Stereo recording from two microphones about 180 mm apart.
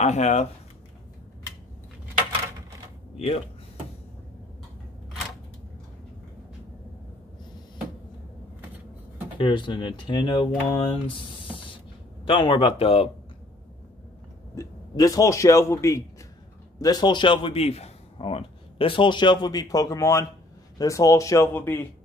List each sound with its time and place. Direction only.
0.0 s speech: 40° left (ahead or behind)
3.2 s speech: 35° left (ahead or behind)
9.4 s speech: 25° left (ahead or behind)
12.3 s speech: 25° left (ahead or behind)
14.5 s a man's voice: 20° left (ahead or behind)